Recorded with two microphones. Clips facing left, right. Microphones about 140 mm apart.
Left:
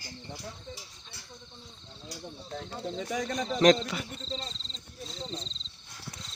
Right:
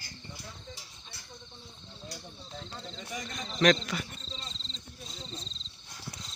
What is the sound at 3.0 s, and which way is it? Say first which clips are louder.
Speech: left 8 dB; 65° left (ahead or behind).